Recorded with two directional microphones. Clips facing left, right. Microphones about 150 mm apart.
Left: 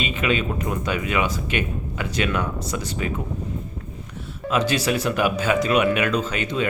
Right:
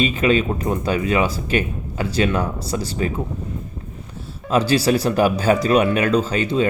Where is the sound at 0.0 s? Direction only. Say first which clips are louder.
Right 6 dB; 35° right (ahead or behind).